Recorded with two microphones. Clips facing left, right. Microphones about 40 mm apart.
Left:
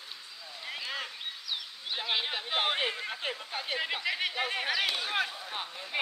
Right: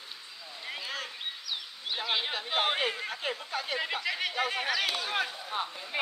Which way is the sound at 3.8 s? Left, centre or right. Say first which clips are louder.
Left 2 dB; centre.